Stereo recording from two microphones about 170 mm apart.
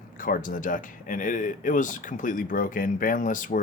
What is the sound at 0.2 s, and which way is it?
Speech, 55° left (ahead or behind).